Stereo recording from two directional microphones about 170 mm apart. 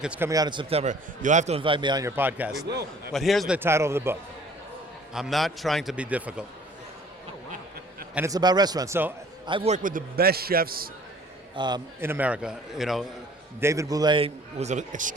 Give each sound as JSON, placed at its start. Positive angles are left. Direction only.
{"t": 0.0, "sound": "a man's voice", "side_deg": -5}
{"t": 0.3, "sound": "a man's voice", "side_deg": -25}
{"t": 3.1, "sound": "a man's voice", "side_deg": 0}
{"t": 3.6, "sound": "a man's voice", "side_deg": -15}
{"t": 5.1, "sound": "a man's voice", "side_deg": 0}
{"t": 8.1, "sound": "a man's voice", "side_deg": -20}
{"t": 9.5, "sound": "a man's voice", "side_deg": -30}
{"t": 9.7, "sound": "a man's voice", "side_deg": -55}
{"t": 11.5, "sound": "a man's voice", "side_deg": -25}
{"t": 11.9, "sound": "a man's voice", "side_deg": -10}
{"t": 13.6, "sound": "a man's voice", "side_deg": -15}